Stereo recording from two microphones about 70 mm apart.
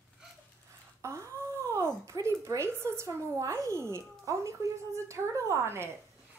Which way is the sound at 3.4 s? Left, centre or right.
Right.